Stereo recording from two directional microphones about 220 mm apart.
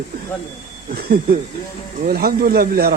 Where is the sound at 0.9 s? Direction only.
45° right (ahead or behind).